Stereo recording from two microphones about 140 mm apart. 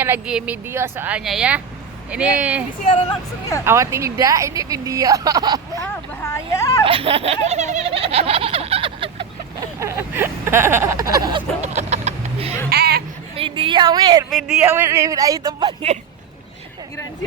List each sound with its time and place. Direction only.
0.0 s speech: 10° right (ahead or behind)
1.2 s speech: 5° right (ahead or behind); by 5.5 s 30° right (ahead or behind)
5.7 s speech: 20° left (ahead or behind)
6.8 s a sound: 40° right (ahead or behind)
9.8 s vehicle: 20° right (ahead or behind)
11.6 s vehicle: 55° right (ahead or behind)
12.7 s a sound: 90° right
13.3 s a woman's voice: 40° right (ahead or behind)
14.3 s speech: centre (ahead or behind)
14.8 s speech: 20° right (ahead or behind)